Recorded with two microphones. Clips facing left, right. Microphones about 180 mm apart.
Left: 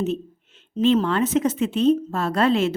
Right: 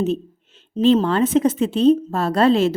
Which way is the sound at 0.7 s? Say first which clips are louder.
Right 3 dB; 30° right (ahead or behind).